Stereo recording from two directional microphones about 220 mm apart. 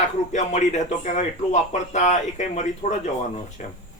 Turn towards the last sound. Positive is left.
turn(degrees=35)  # may be behind; listen again after turning